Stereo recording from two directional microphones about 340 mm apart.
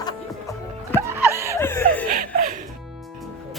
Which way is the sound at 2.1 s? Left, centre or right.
Right.